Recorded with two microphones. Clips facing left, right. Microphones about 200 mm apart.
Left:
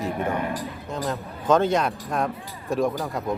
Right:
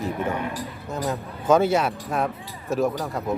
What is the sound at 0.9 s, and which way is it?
Speech, 5° right (ahead or behind).